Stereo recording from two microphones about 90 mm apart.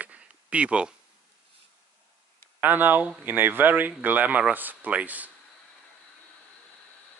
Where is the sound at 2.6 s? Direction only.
20° right (ahead or behind).